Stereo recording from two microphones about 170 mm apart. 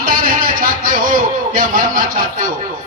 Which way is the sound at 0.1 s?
55° right (ahead or behind).